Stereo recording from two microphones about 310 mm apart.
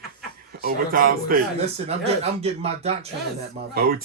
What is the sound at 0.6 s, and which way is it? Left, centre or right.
Speech, right.